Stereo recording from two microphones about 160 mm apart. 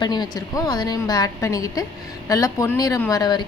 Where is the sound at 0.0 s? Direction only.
25° left (ahead or behind).